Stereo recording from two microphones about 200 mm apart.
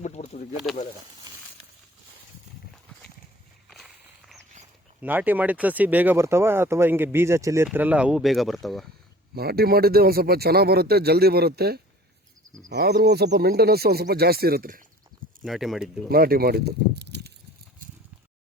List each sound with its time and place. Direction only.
0.0 s a sound: 35° left (ahead or behind)
4.9 s speech: 10° right (ahead or behind)
9.3 s a man's voice: 50° right (ahead or behind)
15.1 s a sound: 45° right (ahead or behind)
15.4 s speech: centre (ahead or behind)
16.0 s a man's voice: 50° right (ahead or behind)